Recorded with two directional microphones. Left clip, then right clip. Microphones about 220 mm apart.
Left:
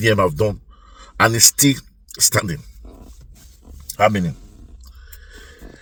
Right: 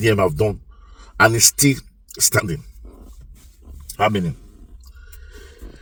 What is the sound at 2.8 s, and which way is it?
Dog, 40° left (ahead or behind).